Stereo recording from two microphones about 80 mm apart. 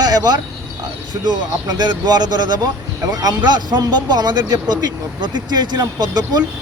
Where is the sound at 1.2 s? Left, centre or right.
Right.